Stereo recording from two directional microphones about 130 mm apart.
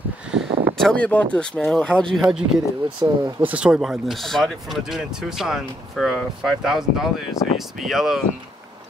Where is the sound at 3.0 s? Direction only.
15° right (ahead or behind).